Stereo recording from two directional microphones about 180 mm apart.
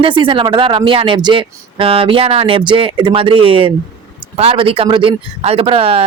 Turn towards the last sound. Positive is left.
turn(degrees=-30)  # may be behind; listen again after turning